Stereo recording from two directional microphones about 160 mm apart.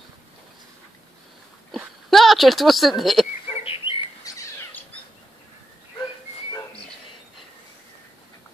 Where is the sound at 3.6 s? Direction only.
35° left (ahead or behind).